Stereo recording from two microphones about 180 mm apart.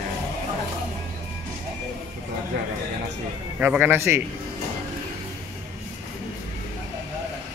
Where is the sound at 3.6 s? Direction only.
10° right (ahead or behind).